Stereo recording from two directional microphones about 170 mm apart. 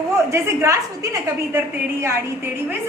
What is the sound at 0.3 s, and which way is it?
A woman's voice, 15° right (ahead or behind).